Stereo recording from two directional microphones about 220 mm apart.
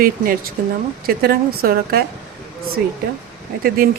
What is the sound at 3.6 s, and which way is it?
Speech, 40° right (ahead or behind).